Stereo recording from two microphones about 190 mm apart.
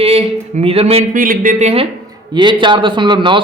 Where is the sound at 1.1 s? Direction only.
45° right (ahead or behind).